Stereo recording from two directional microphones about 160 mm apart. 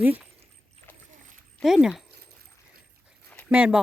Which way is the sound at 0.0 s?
10° right (ahead or behind).